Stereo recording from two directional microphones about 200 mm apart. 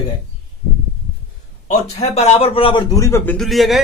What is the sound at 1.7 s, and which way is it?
A man's voice, 30° left (ahead or behind).